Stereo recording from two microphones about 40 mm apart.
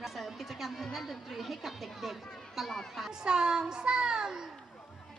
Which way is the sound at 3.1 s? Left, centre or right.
Centre.